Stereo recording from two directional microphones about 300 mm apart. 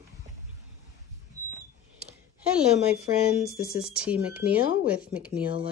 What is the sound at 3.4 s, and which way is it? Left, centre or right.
Speech, left.